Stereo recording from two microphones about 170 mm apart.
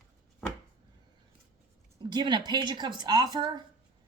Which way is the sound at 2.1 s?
25° right (ahead or behind).